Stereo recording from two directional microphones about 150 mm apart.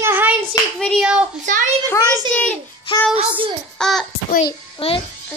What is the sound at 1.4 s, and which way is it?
Speech, 55° right (ahead or behind).